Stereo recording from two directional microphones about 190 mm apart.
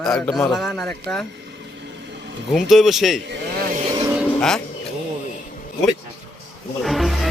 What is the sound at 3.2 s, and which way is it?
Speech, 65° right (ahead or behind).